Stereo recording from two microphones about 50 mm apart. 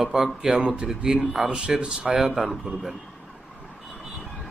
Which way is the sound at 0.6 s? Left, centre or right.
Right.